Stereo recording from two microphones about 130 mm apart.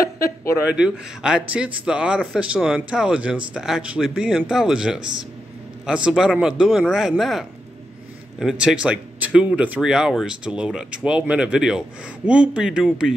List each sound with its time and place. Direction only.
0.0 s speech: 20° left (ahead or behind)
0.7 s speech: 5° right (ahead or behind)